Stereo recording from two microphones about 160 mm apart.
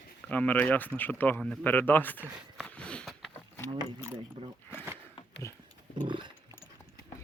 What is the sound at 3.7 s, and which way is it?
Speech, 25° right (ahead or behind).